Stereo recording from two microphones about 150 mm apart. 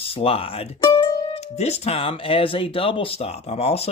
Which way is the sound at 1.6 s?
45° left (ahead or behind).